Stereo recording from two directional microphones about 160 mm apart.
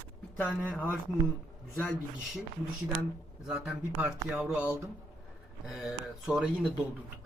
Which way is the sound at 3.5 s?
5° right (ahead or behind).